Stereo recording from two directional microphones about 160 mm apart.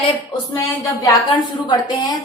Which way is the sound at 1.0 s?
25° left (ahead or behind).